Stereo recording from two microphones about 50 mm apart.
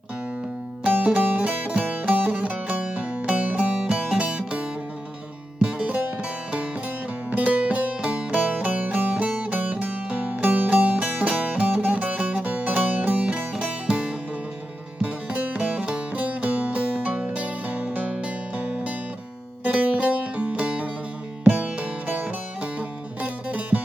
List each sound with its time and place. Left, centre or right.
0.9 s music: right
5.6 s music: right
7.3 s music: right
19.6 s music: right